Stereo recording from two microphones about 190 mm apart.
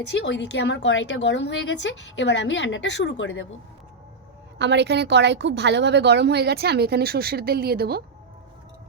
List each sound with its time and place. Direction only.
0.1 s a woman's voice: 70° left (ahead or behind)
4.5 s a woman's voice: 65° right (ahead or behind)